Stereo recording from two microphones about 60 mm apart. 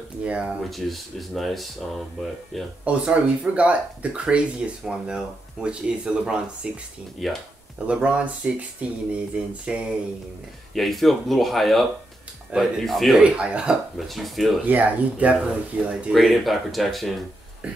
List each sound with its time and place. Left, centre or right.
0.2 s speech: centre
0.7 s speech: centre
2.8 s speech: right
7.2 s speech: centre
7.8 s speech: right
9.7 s speech: centre
10.7 s speech: centre
13.2 s speech: centre
13.9 s speech: centre
14.7 s speech: right
15.3 s speech: centre